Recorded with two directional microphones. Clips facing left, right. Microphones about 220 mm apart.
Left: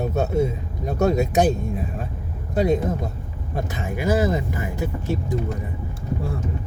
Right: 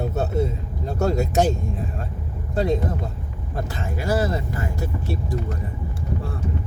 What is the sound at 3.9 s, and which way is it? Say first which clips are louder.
Speech: left 3 dB; 20° left (ahead or behind).